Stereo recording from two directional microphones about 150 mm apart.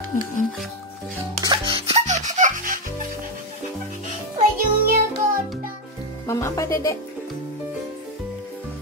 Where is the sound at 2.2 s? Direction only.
55° right (ahead or behind).